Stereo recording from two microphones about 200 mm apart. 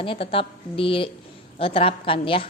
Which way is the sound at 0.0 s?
25° left (ahead or behind).